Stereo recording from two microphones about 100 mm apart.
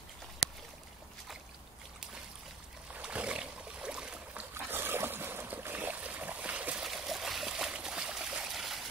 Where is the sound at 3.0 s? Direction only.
10° right (ahead or behind).